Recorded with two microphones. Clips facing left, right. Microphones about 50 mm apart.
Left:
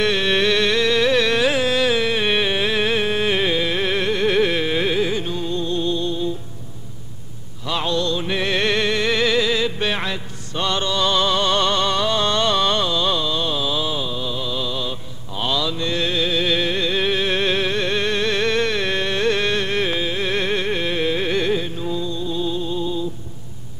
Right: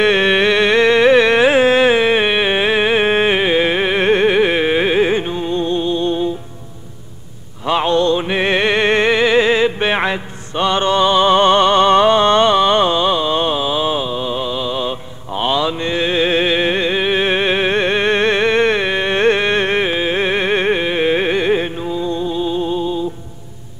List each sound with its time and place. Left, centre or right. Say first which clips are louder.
0.0 s carnatic music: right 6 dB; right
4.3 s music: right 5 dB; right
7.6 s music: right 8 dB; right
8.8 s music: right 6 dB; right
10.9 s a sound: right 8 dB; right
21.5 s music: right 5 dB; right